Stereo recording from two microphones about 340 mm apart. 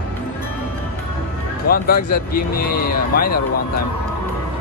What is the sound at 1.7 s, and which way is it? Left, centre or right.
Speech, left.